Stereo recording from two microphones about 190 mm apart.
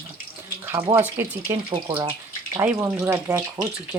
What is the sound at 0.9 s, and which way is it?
Speech, 10° right (ahead or behind).